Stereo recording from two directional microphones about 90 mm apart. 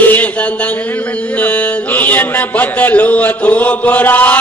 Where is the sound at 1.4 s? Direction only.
20° left (ahead or behind).